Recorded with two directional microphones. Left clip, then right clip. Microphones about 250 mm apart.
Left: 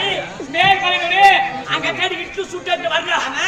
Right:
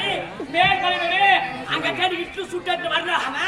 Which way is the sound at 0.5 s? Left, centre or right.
Centre.